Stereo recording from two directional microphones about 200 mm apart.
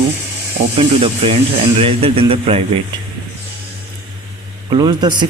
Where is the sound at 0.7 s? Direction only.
30° right (ahead or behind).